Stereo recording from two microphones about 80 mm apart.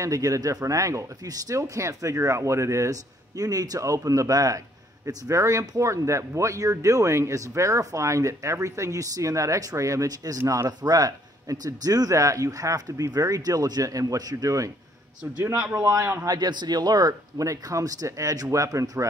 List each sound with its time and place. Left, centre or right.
0.0 s speech: right
15.5 s a man's voice: centre
15.8 s speech: right
16.3 s speech: right